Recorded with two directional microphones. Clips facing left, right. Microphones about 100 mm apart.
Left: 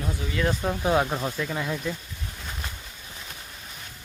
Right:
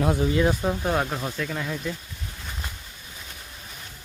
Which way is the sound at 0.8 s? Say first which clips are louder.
Left 2 dB; 5° left (ahead or behind).